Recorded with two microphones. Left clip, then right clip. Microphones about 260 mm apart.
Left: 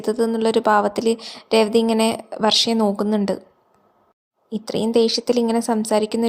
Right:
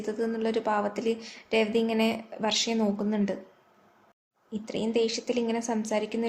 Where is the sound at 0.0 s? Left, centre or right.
Left.